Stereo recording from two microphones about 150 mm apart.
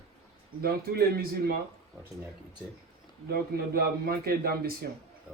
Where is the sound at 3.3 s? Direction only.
90° right.